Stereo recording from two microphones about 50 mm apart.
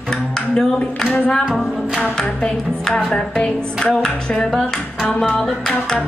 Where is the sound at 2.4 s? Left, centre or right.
Left.